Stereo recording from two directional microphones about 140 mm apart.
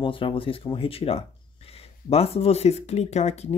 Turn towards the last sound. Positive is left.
turn(degrees=50)  # may be behind; listen again after turning